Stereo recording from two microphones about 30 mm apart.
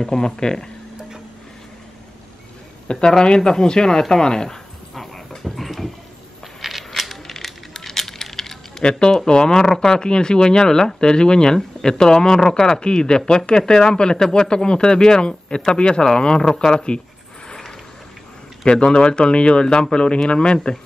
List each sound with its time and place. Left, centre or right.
0.0 s speech: left
3.1 s speech: left
5.4 s a sound: centre
6.6 s coin: centre
7.0 s coin: centre
7.4 s a sound: centre
9.5 s speech: left
14.2 s speech: centre
14.5 s speech: left
18.7 s speech: left